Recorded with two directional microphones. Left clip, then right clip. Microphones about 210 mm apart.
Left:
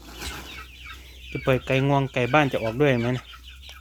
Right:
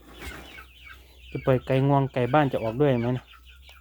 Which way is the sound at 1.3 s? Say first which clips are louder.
Left 1 dB; 20° right (ahead or behind).